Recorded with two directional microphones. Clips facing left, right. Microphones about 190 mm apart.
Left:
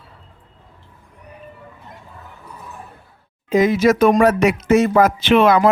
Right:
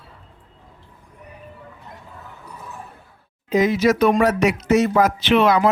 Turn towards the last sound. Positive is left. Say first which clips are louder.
# left 3 dB
turn(degrees=50)  # may be behind; listen again after turning